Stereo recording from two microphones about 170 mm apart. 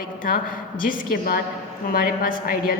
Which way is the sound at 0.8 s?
60° left (ahead or behind).